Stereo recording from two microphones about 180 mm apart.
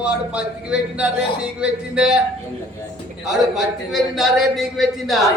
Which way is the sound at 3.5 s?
Centre (ahead or behind).